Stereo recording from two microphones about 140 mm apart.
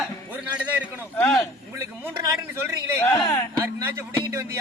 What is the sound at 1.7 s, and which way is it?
A man's voice, 20° right (ahead or behind).